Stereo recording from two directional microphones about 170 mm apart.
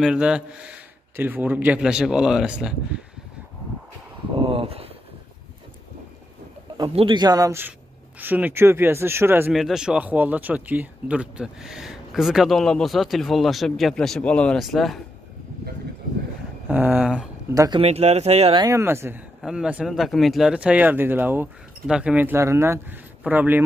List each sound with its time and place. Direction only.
0.0 s speech: 5° right (ahead or behind)
4.4 s a sound: 30° right (ahead or behind)
6.9 s a man's voice: 30° right (ahead or behind); by 9.5 s 15° right (ahead or behind)
9.5 s speech: centre (ahead or behind)
16.6 s speech: 10° right (ahead or behind)
17.6 s a man's voice: 25° right (ahead or behind)
17.8 s speech: 40° right (ahead or behind)
18.6 s speech: 15° right (ahead or behind)